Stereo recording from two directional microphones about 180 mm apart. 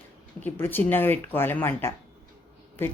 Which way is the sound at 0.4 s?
10° left (ahead or behind).